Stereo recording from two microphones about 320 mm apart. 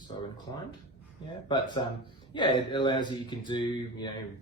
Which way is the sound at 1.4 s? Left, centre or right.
Centre.